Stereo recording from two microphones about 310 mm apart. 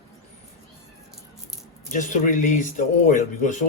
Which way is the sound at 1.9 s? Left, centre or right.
Left.